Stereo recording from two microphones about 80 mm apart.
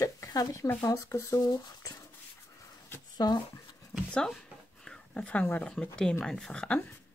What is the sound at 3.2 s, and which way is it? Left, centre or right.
Speech, left.